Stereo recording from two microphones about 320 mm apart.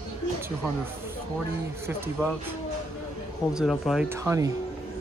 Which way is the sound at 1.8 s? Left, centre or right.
Centre.